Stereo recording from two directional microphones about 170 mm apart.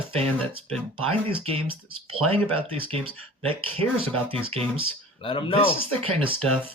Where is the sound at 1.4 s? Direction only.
35° right (ahead or behind).